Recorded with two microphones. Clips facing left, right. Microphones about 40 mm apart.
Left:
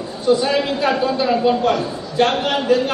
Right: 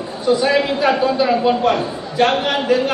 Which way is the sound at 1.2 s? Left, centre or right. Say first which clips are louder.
Left 2 dB; centre.